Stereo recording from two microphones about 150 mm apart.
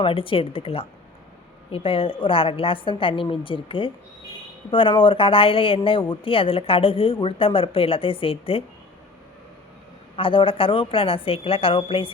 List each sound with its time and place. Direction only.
0.0 s speech: 35° left (ahead or behind)
10.2 s speech: 35° left (ahead or behind)